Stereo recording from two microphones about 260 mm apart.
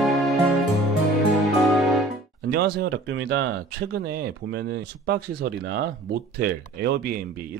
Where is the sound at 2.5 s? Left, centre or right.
Right.